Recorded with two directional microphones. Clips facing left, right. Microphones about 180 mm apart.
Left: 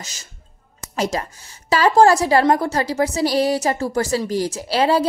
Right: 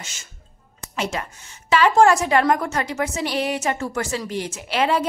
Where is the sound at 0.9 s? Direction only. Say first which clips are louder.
Left 4 dB; 40° left (ahead or behind).